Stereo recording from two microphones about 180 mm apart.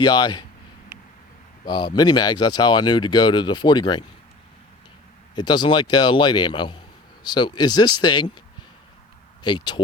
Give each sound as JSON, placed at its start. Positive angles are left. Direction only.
{"t": 0.0, "sound": "speech", "side_deg": 25}
{"t": 1.6, "sound": "speech", "side_deg": 25}
{"t": 5.3, "sound": "speech", "side_deg": 25}
{"t": 9.4, "sound": "speech", "side_deg": 25}